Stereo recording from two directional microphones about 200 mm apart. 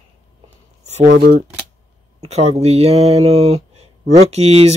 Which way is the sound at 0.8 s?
35° right (ahead or behind).